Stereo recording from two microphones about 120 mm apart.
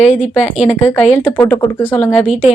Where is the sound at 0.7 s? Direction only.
20° left (ahead or behind).